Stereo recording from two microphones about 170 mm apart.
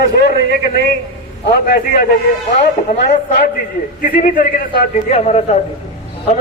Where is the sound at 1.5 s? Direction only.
60° left (ahead or behind).